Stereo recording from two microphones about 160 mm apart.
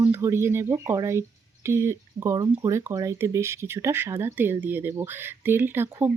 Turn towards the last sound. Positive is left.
turn(degrees=-15)  # may be behind; listen again after turning